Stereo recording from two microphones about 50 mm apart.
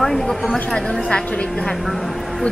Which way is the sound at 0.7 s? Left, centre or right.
Centre.